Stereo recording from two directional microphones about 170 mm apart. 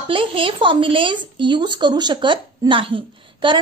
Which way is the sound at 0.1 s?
30° right (ahead or behind).